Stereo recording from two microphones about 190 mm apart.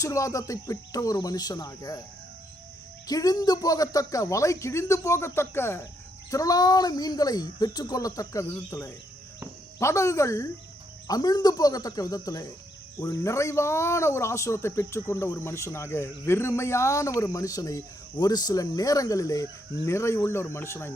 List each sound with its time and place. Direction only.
0.0 s speech: 15° left (ahead or behind)
3.1 s speech: 20° left (ahead or behind)